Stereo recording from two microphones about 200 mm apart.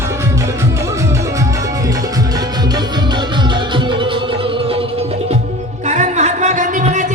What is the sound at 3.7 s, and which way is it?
Music, 25° right (ahead or behind).